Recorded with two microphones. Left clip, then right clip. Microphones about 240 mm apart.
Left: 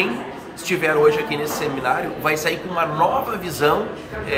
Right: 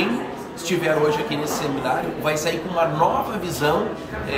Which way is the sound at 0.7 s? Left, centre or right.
Centre.